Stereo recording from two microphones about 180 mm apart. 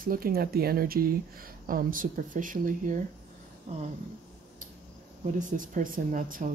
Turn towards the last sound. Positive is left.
turn(degrees=-45)  # may be behind; listen again after turning